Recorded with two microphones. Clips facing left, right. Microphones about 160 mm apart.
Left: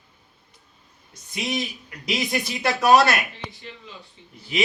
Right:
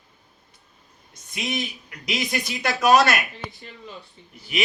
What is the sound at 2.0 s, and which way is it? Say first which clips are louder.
Speech: left 1 dB; centre (ahead or behind).